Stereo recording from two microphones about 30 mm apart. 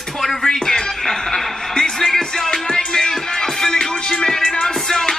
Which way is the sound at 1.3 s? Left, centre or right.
Left.